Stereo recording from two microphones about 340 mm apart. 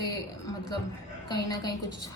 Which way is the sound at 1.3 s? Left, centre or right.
Centre.